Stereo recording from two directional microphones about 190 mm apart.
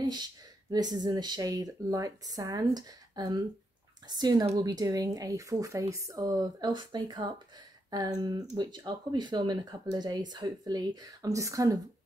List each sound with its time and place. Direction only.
0.0 s speech: 20° right (ahead or behind)